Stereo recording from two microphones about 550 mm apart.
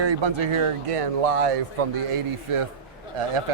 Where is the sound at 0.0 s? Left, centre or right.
Right.